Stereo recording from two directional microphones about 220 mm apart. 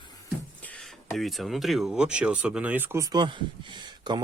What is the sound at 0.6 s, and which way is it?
Speech, 5° left (ahead or behind).